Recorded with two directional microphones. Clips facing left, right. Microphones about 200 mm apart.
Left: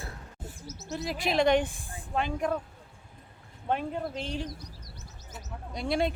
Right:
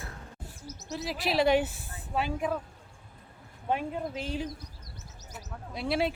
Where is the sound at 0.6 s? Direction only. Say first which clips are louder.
Right 2 dB; 15° right (ahead or behind).